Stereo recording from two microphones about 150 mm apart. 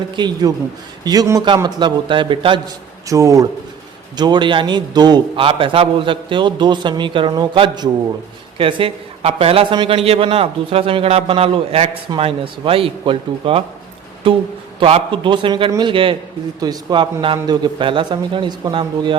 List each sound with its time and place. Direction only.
0.2 s a man's voice: 30° right (ahead or behind)
3.1 s a man's voice: 20° right (ahead or behind)